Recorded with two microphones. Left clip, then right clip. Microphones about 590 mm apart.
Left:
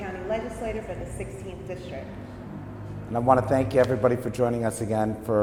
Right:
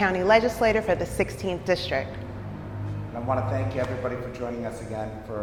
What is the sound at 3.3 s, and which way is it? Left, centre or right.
A man's voice, left.